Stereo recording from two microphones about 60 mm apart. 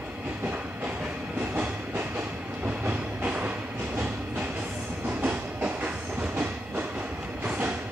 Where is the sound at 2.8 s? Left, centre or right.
Right.